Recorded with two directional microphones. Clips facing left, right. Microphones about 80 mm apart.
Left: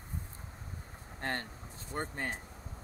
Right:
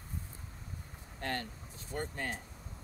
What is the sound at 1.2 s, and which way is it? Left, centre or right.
Speech, left.